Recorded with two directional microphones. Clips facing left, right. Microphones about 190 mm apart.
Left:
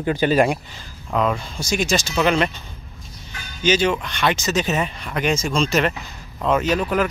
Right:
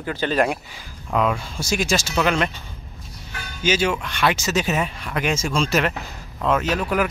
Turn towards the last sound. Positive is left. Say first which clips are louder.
# left 2 dB
turn(degrees=0)  # may be behind; listen again after turning